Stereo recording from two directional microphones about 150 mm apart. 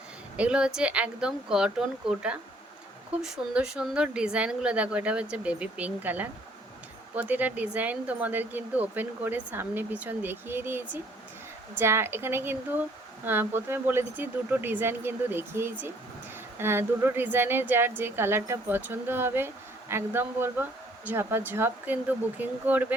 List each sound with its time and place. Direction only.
0.3 s speech: 5° right (ahead or behind)